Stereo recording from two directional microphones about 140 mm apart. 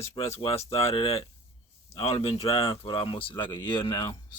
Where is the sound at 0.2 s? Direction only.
45° left (ahead or behind).